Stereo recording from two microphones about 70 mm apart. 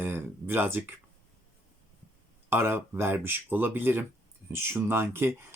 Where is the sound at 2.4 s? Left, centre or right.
Right.